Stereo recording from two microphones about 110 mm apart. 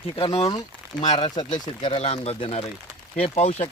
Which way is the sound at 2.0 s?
65° left (ahead or behind).